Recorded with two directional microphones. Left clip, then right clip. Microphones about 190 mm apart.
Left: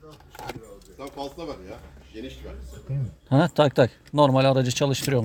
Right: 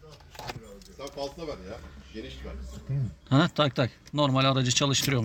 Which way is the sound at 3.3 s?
25° left (ahead or behind).